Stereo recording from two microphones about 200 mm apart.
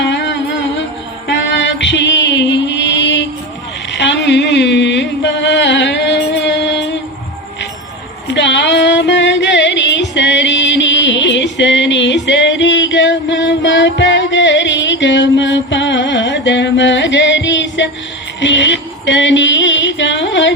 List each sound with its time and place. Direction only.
0.0 s music: 60° left (ahead or behind)
3.9 s a sound: 60° left (ahead or behind)
8.3 s music: 60° left (ahead or behind)